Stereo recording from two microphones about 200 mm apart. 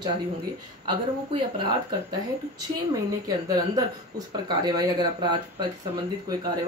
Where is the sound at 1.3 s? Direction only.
25° right (ahead or behind).